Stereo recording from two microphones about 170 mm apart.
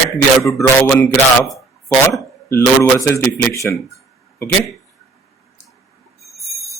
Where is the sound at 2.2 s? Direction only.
15° left (ahead or behind).